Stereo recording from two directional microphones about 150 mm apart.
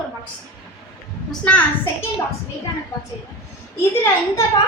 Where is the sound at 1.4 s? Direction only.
10° left (ahead or behind).